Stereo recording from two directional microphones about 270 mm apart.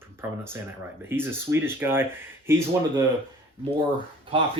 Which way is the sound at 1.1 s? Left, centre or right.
Centre.